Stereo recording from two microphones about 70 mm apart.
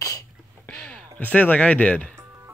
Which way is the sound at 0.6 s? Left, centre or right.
Centre.